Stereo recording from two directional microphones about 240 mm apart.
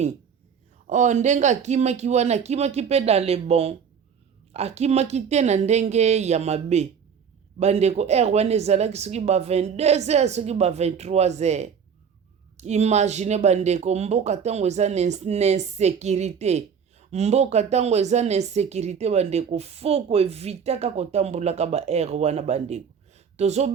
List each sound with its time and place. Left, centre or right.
0.9 s speech: right